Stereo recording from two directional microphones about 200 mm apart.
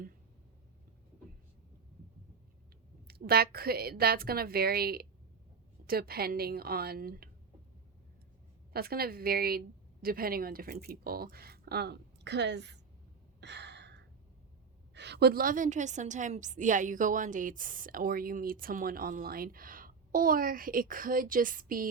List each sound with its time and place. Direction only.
3.1 s a woman's voice: 50° right (ahead or behind)
8.7 s a woman's voice: 50° right (ahead or behind)
13.4 s gasp: 60° right (ahead or behind)
14.9 s a woman's voice: 55° right (ahead or behind)